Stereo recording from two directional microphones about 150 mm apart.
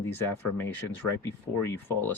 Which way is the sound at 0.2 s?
15° left (ahead or behind).